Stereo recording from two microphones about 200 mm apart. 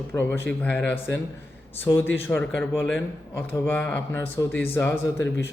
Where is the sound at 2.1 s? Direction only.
10° left (ahead or behind).